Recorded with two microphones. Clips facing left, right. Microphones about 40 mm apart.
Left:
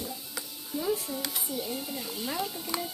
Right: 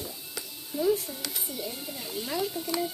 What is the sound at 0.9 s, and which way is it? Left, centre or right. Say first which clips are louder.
Speech: even; centre.